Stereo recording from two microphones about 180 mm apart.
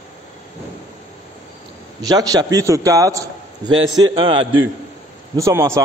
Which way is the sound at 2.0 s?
20° right (ahead or behind).